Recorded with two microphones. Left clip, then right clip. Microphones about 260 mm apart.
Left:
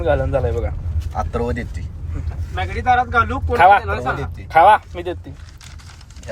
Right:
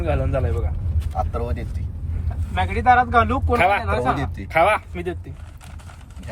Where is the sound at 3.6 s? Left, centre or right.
Centre.